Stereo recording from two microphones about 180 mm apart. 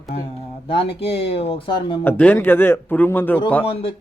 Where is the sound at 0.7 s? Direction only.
30° left (ahead or behind).